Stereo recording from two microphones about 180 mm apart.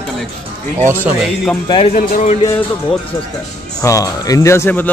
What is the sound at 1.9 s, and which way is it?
Speech, 45° left (ahead or behind).